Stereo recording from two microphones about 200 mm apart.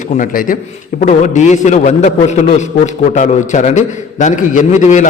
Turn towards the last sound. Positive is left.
turn(degrees=35)  # may be behind; listen again after turning